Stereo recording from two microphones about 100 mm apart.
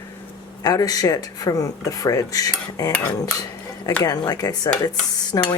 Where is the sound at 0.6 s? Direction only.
40° left (ahead or behind).